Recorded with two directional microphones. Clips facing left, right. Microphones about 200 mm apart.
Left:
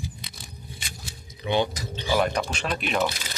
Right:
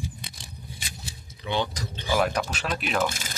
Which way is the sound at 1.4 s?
15° left (ahead or behind).